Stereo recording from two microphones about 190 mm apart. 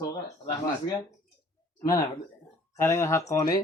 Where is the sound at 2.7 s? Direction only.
15° left (ahead or behind).